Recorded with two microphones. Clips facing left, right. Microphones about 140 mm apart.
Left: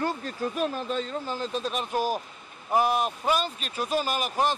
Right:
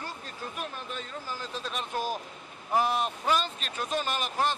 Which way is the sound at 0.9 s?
25° left (ahead or behind).